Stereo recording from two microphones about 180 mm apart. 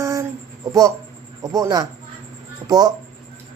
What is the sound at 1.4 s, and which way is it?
Speech, 20° right (ahead or behind).